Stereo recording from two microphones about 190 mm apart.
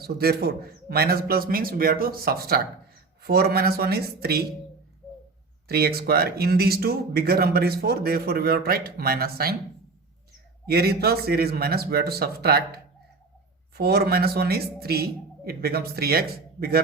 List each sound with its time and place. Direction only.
0.0 s speech: 55° right (ahead or behind)
5.6 s speech: 55° right (ahead or behind)
10.7 s speech: 55° right (ahead or behind)